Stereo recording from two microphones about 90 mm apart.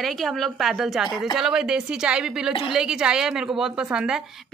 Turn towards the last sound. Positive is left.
turn(degrees=-10)  # may be behind; listen again after turning